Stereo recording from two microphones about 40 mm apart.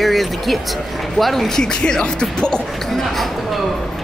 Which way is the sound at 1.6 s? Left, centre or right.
Centre.